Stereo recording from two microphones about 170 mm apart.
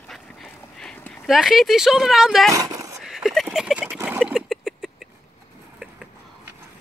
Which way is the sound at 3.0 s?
Centre (ahead or behind).